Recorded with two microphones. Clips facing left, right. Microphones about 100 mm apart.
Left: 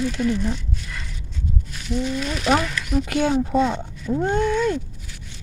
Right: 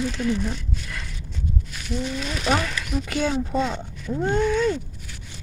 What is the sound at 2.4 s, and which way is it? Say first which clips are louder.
Speech: left 3 dB; 15° left (ahead or behind).